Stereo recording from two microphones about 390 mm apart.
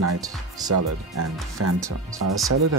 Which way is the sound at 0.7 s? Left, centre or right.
Right.